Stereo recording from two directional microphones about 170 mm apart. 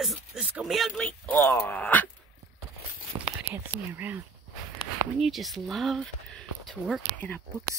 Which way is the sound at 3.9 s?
10° right (ahead or behind).